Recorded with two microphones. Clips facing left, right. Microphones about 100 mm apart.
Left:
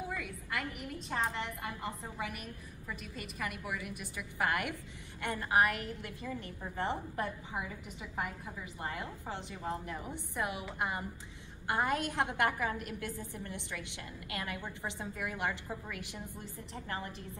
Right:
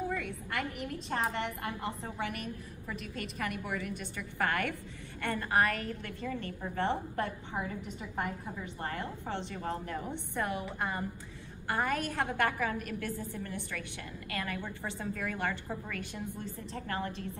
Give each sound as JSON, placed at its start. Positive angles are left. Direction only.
{"t": 0.1, "sound": "a woman's voice", "side_deg": 5}
{"t": 8.8, "sound": "a woman's voice", "side_deg": 10}